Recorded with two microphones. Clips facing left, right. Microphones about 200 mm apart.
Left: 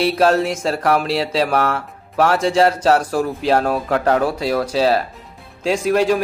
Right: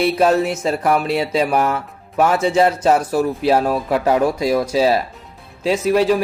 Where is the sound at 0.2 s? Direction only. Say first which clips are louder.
Even; 10° right (ahead or behind).